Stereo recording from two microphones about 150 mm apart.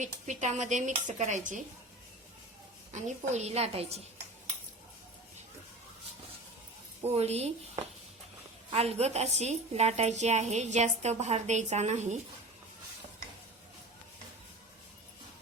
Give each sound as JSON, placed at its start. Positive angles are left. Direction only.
{"t": 0.0, "sound": "a woman's voice", "side_deg": -55}
{"t": 2.9, "sound": "a woman's voice", "side_deg": -45}
{"t": 7.1, "sound": "a woman's voice", "side_deg": -45}
{"t": 8.7, "sound": "a woman's voice", "side_deg": -45}